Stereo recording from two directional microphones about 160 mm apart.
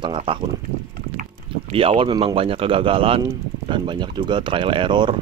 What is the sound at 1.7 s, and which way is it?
Speech, 35° right (ahead or behind).